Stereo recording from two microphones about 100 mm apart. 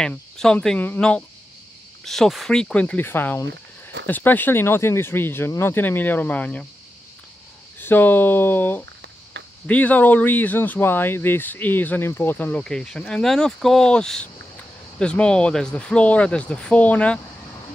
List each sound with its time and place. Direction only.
0.4 s speech: 5° left (ahead or behind)
0.7 s speech: 15° left (ahead or behind)
2.0 s speech: centre (ahead or behind)
7.8 s speech: 20° left (ahead or behind)
12.6 s speech: 5° left (ahead or behind)